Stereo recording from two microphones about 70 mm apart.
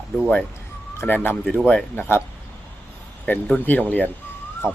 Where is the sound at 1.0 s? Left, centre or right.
Left.